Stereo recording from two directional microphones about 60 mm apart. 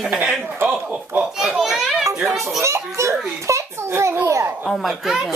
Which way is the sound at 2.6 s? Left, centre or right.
Right.